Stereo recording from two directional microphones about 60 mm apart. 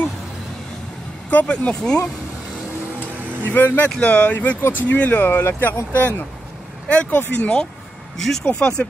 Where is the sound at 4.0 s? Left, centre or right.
Left.